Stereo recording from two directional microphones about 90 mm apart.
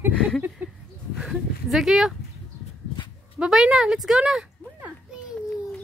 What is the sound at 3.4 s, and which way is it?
A woman's voice, 5° right (ahead or behind).